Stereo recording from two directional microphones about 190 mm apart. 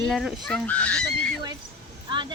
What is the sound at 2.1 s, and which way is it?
Vehicle, 25° right (ahead or behind).